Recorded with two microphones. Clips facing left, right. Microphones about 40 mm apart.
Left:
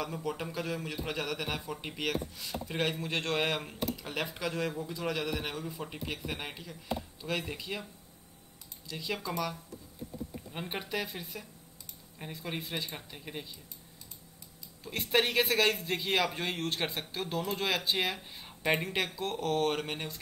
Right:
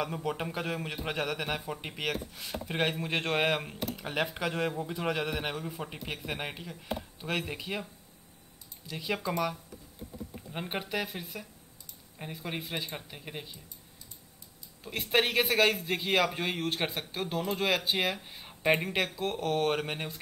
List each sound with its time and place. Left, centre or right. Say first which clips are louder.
0.0 s speech: right 3 dB; centre
0.5 s speech: right 1 dB; right; by 2.1 s centre
2.3 s speech: right 1 dB; right
8.8 s speech: right 3 dB; centre
14.8 s speech: right 1 dB; centre